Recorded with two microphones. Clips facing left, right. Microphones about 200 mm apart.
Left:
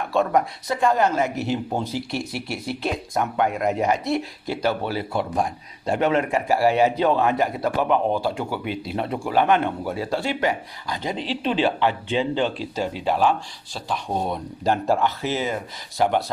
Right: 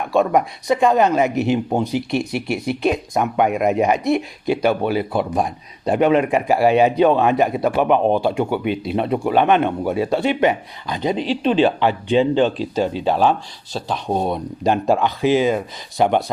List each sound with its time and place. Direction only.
0.2 s speech: 15° right (ahead or behind)